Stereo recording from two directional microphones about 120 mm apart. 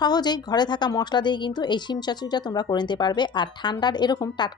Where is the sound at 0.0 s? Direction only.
35° left (ahead or behind).